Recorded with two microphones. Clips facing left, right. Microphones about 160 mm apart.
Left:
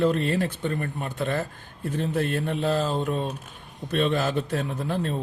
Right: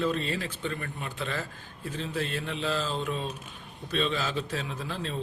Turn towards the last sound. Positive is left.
turn(degrees=50)  # may be behind; listen again after turning